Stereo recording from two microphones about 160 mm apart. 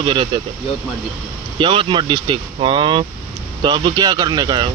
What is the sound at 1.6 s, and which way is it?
Speech, 30° right (ahead or behind).